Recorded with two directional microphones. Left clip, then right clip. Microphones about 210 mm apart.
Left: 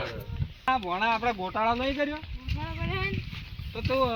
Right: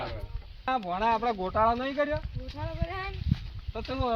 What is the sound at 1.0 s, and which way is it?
Speech, 25° right (ahead or behind).